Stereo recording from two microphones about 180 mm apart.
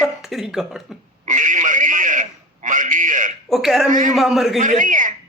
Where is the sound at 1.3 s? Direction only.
45° right (ahead or behind).